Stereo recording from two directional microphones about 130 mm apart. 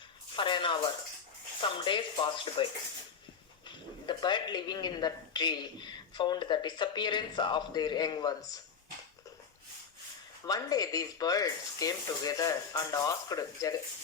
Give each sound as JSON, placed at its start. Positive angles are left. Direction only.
{"t": 0.3, "sound": "speech", "side_deg": 40}
{"t": 4.0, "sound": "speech", "side_deg": 35}
{"t": 10.4, "sound": "speech", "side_deg": 30}